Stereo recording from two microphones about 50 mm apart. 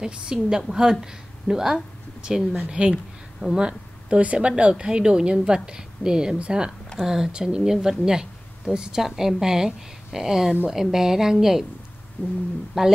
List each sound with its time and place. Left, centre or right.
0.0 s speech: centre
2.9 s a sound: centre
3.5 s a woman's voice: centre
12.2 s speech: left
12.7 s speech: centre